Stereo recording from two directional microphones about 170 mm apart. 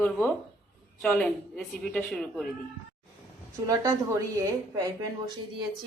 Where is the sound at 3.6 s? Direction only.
15° right (ahead or behind).